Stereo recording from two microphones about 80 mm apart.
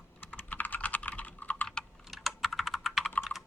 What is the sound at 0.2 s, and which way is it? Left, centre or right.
Typing, centre.